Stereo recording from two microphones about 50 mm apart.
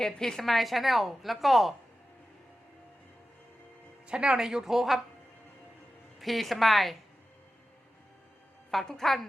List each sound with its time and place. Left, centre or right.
0.0 s a woman's voice: centre
4.1 s speech: right
4.4 s a woman's voice: centre
6.1 s a woman's voice: centre
8.7 s a woman's voice: centre